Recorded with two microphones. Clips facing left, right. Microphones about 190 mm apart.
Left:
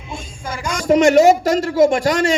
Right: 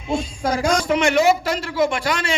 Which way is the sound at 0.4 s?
75° right (ahead or behind).